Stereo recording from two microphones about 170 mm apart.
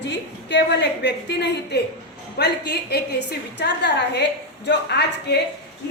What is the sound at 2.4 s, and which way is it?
Speech, 75° left (ahead or behind).